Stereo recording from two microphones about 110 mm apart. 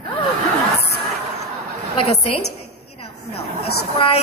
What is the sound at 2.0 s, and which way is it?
Speech, 60° left (ahead or behind).